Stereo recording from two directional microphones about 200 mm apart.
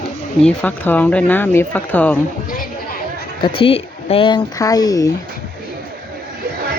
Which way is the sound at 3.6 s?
30° left (ahead or behind).